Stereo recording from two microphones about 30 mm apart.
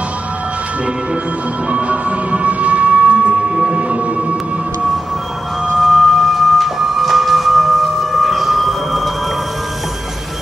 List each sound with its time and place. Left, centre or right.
1.7 s music: right
5.8 s printer: centre